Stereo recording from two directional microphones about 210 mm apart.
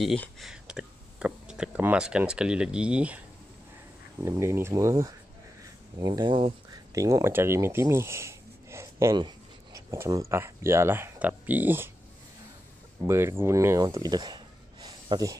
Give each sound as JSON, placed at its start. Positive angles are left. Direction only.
{"t": 0.0, "sound": "speech", "side_deg": 0}
{"t": 4.2, "sound": "speech", "side_deg": -15}
{"t": 13.0, "sound": "speech", "side_deg": -15}